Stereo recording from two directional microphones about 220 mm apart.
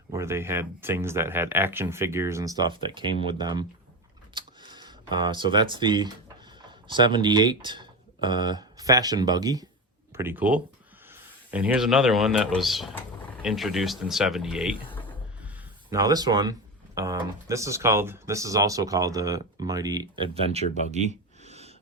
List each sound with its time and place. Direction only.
0.1 s speech: 10° right (ahead or behind)
15.9 s speech: 15° right (ahead or behind)
20.9 s a sound: 30° right (ahead or behind)